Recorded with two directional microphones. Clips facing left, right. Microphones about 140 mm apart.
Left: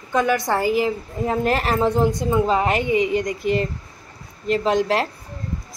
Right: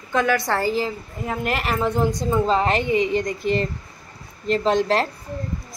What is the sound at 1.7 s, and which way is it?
Speech, 25° left (ahead or behind).